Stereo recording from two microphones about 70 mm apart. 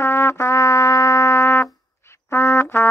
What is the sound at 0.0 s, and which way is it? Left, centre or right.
Trumpet, left.